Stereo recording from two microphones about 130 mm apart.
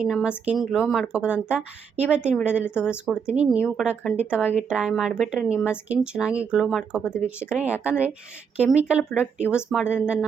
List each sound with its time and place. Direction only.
0.0 s speech: 5° right (ahead or behind)
7.0 s speech: 15° left (ahead or behind)
7.5 s speech: 10° right (ahead or behind)